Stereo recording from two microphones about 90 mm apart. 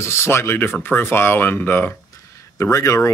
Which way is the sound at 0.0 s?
30° left (ahead or behind).